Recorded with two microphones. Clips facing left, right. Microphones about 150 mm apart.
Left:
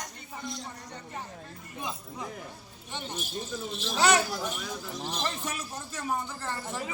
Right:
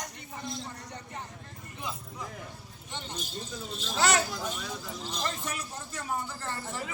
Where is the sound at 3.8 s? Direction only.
15° left (ahead or behind).